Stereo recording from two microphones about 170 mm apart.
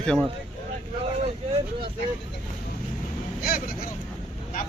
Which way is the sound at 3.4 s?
60° left (ahead or behind).